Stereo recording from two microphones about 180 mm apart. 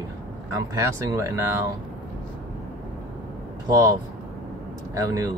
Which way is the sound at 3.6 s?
20° right (ahead or behind).